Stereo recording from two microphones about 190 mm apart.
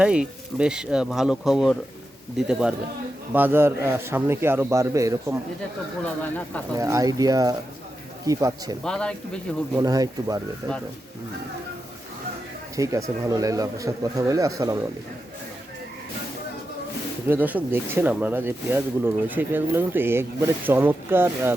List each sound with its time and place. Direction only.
0.0 s speech: 5° right (ahead or behind)
6.2 s speech: 10° left (ahead or behind)
6.7 s speech: 15° right (ahead or behind)
8.8 s speech: 5° left (ahead or behind)
9.7 s speech: 20° right (ahead or behind)
12.7 s speech: 15° right (ahead or behind)
17.2 s speech: 10° right (ahead or behind)